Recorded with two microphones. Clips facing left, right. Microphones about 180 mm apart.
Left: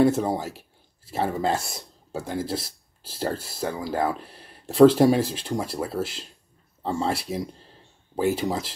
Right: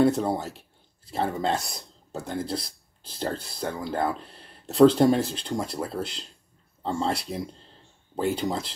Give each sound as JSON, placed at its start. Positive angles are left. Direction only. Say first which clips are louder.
{"t": 0.0, "sound": "speech", "louder": "left 1 dB", "side_deg": 5}